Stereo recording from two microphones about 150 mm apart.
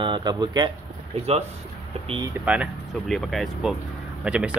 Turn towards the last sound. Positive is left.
turn(degrees=-5)  # may be behind; listen again after turning